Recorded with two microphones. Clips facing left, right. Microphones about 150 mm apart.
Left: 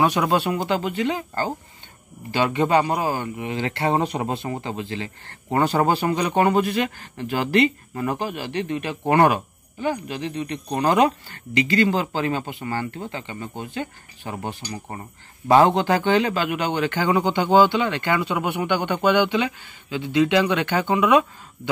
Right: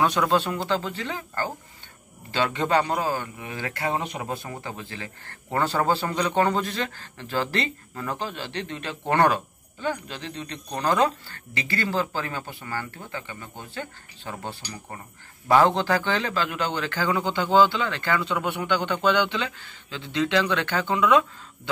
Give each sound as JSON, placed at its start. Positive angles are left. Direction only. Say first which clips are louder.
{"t": 0.0, "sound": "a man's voice", "louder": "left 2 dB", "side_deg": 10}